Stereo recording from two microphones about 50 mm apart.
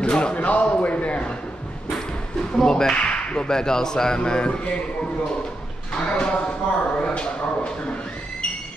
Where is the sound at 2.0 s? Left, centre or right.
Centre.